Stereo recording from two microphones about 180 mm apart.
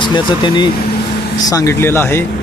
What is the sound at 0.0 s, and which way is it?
Speech, 25° left (ahead or behind).